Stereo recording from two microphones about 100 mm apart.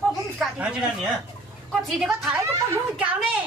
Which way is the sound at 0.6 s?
10° right (ahead or behind).